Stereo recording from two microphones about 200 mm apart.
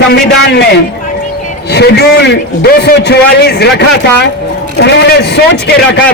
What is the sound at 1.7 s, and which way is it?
A man's voice, 55° left (ahead or behind).